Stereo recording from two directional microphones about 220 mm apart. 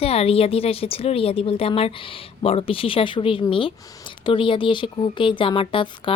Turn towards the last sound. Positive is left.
turn(degrees=25)  # may be behind; listen again after turning